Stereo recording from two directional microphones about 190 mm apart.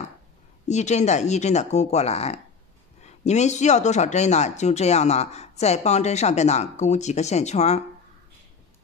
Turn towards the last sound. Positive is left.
turn(degrees=35)  # may be behind; listen again after turning